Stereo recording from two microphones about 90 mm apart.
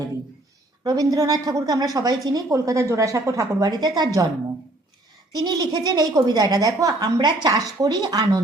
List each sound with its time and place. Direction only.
0.9 s a woman's voice: 45° right (ahead or behind)
3.7 s a woman's voice: 50° right (ahead or behind)
5.3 s a woman's voice: 50° right (ahead or behind)
7.2 s a woman's voice: 50° right (ahead or behind)